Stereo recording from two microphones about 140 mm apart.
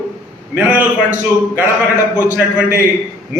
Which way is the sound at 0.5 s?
15° right (ahead or behind).